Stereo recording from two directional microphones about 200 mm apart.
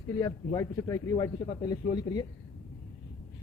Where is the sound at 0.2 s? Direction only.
15° left (ahead or behind).